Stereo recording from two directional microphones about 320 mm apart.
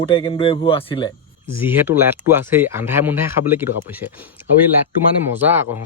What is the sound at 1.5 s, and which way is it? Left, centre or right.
Speech, centre.